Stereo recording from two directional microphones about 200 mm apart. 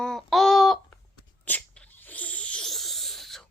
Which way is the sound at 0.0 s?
Centre (ahead or behind).